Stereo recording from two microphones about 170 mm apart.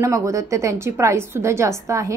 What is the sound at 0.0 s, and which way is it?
A woman's voice, 20° right (ahead or behind).